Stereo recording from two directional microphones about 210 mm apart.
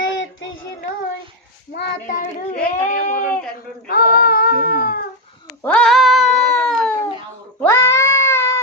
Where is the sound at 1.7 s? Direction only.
40° left (ahead or behind).